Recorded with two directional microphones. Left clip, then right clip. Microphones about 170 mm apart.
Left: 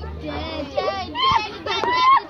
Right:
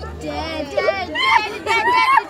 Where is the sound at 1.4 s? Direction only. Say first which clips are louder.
Right 5 dB; 15° right (ahead or behind).